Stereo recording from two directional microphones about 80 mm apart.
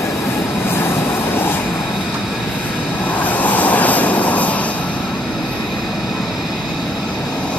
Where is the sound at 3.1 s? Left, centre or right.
Centre.